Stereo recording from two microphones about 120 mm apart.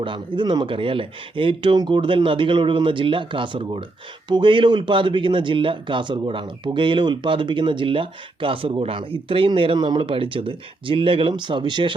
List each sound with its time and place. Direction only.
0.0 s speech: 40° right (ahead or behind)